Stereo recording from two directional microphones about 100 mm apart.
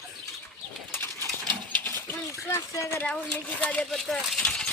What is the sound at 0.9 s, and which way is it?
Pigeon, 25° left (ahead or behind).